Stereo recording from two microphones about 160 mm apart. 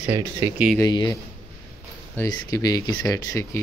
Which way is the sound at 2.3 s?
25° left (ahead or behind).